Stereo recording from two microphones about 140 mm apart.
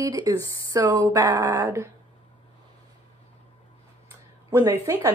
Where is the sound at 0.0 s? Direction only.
25° right (ahead or behind).